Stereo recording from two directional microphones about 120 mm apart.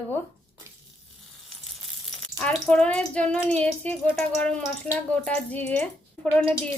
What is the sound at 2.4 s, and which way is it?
Speech, 5° left (ahead or behind).